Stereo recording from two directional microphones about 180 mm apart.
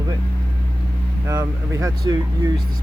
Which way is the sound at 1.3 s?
20° right (ahead or behind).